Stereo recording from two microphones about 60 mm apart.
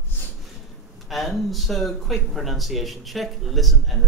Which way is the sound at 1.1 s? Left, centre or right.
Centre.